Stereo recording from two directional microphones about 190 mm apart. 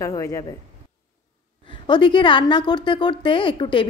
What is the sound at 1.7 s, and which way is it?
A woman's voice, 25° left (ahead or behind).